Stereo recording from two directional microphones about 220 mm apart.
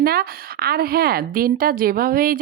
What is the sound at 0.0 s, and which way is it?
A woman's voice, 45° right (ahead or behind).